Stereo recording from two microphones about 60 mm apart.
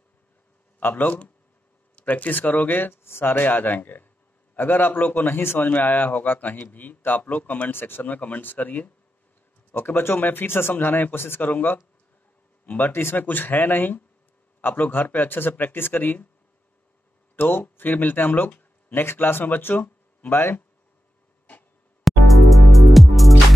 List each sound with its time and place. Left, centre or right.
0.7 s a man's voice: left
9.8 s speech: left
17.4 s speech: left
20.2 s speech: left
22.0 s music: centre